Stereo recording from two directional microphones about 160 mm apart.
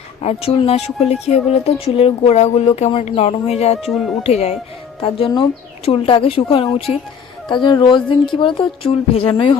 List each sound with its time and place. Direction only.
0.2 s speech: 40° left (ahead or behind)